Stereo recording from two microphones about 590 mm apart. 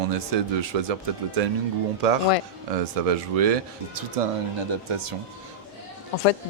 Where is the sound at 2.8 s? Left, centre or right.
Right.